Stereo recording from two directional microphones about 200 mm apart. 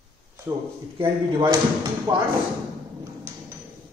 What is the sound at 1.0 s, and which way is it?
Speech, 25° right (ahead or behind).